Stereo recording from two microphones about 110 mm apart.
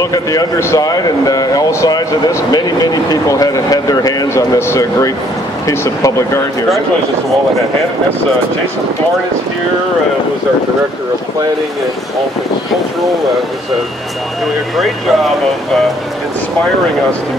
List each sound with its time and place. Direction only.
0.0 s speech: 35° left (ahead or behind)
4.3 s speech: 25° left (ahead or behind)
14.8 s speech: centre (ahead or behind)